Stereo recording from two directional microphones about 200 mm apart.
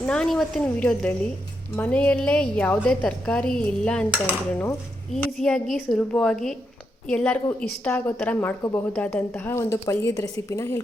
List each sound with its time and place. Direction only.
0.0 s a woman's voice: 5° left (ahead or behind)
5.1 s a woman's voice: 5° left (ahead or behind)